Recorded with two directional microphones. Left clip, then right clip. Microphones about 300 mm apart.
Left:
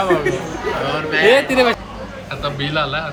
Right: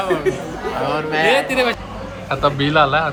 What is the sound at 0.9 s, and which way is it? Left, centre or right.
Speech, right.